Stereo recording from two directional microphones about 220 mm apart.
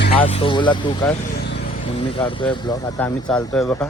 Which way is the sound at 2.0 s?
25° left (ahead or behind).